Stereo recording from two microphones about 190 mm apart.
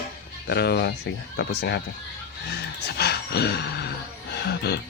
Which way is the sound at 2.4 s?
60° left (ahead or behind).